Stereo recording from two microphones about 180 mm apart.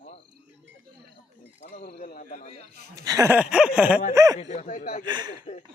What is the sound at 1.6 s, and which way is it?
Speech, 40° left (ahead or behind).